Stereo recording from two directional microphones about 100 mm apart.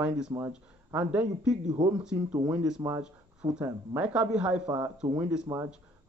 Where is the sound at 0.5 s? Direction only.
10° right (ahead or behind).